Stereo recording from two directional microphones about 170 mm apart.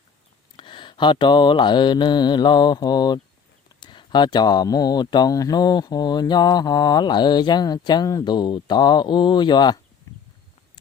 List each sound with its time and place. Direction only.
0.5 s speech: 30° left (ahead or behind)